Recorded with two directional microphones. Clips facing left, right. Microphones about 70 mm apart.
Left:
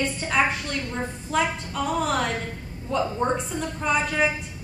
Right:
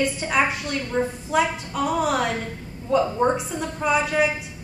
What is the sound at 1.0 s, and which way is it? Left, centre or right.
Speech, centre.